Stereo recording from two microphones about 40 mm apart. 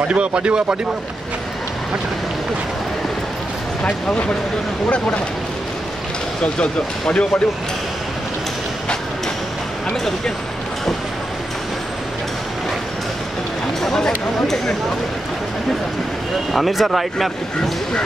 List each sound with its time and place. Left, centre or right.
0.1 s speech: right
3.8 s speech: left
6.4 s speech: left
13.8 s speech: centre
16.5 s speech: centre